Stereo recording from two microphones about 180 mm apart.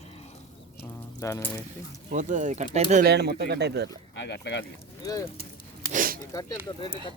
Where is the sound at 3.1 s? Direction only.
65° right (ahead or behind).